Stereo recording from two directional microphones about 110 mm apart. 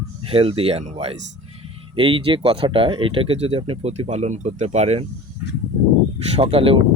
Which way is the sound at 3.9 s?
80° right.